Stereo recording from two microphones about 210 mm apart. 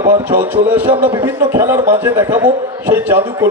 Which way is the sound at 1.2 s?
10° right (ahead or behind).